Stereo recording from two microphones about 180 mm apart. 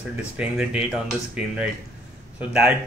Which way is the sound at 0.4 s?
5° right (ahead or behind).